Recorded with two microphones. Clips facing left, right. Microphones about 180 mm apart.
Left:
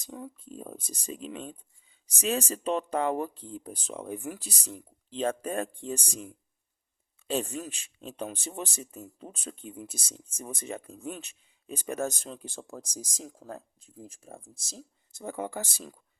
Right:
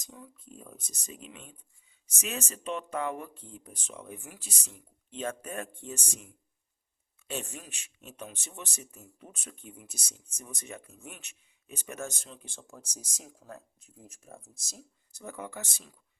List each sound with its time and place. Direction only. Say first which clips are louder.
0.1 s speech: left 9 dB; 55° left (ahead or behind)
0.4 s speech: left 7 dB; 30° left (ahead or behind)